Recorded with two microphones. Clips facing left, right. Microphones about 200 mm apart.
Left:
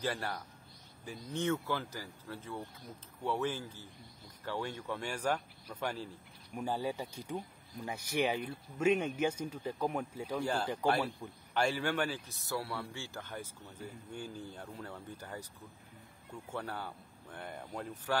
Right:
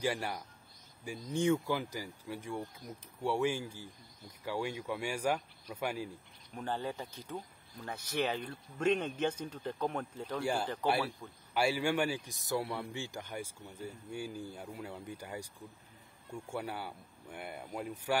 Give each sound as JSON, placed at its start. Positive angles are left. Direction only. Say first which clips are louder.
{"t": 0.0, "sound": "speech", "louder": "right 2 dB", "side_deg": -15}
{"t": 6.5, "sound": "speech", "louder": "left 2 dB", "side_deg": 10}
{"t": 10.4, "sound": "speech", "louder": "even", "side_deg": -10}